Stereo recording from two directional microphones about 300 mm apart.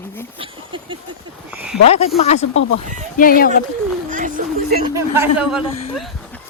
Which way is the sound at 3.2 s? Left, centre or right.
Left.